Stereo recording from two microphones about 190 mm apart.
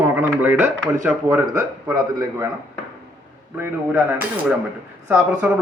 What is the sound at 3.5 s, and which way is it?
Speech, 10° right (ahead or behind).